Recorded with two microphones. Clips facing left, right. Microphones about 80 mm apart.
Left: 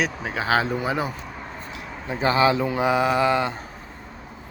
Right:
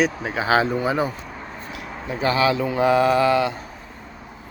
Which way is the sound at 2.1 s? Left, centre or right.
Left.